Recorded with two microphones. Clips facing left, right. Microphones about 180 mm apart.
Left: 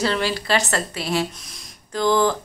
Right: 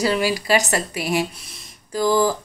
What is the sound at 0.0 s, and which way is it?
A woman's voice, 10° right (ahead or behind).